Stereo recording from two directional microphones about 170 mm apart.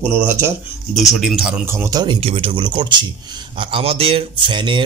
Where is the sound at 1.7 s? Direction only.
20° right (ahead or behind).